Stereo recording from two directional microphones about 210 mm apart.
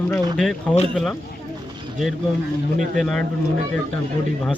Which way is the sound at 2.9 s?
Centre (ahead or behind).